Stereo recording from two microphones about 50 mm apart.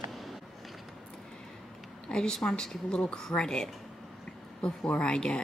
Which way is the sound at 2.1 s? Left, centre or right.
Centre.